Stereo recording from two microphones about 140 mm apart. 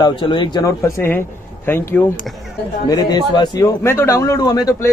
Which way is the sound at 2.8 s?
30° left (ahead or behind).